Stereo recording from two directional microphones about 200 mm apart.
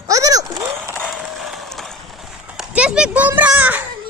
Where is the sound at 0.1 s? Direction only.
15° right (ahead or behind).